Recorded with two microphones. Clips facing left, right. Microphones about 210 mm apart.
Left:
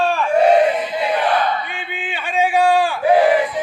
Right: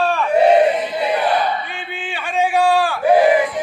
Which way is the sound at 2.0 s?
10° left (ahead or behind).